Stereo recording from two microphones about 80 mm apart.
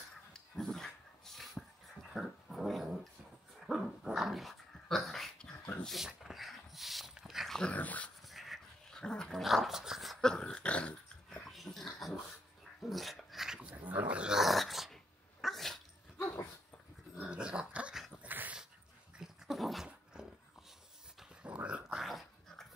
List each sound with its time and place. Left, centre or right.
0.3 s dog: centre
7.6 s dog: centre
8.2 s dog: centre
10.2 s dog: centre
11.4 s dog: centre
13.7 s dog: right; by 15.8 s centre
17.2 s dog: centre
19.1 s dog: centre
21.5 s a sound: centre
21.9 s dog: centre